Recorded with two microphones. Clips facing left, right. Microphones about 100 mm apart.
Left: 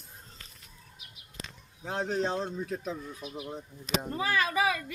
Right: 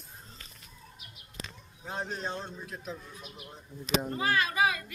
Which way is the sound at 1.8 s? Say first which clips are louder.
Left 6 dB; 90° left.